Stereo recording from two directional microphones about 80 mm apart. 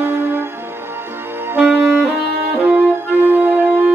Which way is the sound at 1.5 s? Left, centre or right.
Right.